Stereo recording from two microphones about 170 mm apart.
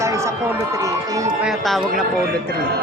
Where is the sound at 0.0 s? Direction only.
15° right (ahead or behind).